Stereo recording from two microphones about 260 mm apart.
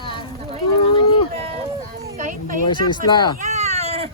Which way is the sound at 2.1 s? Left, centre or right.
Right.